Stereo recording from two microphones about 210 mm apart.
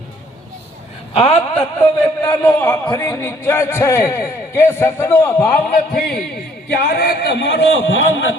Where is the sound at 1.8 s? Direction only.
10° left (ahead or behind).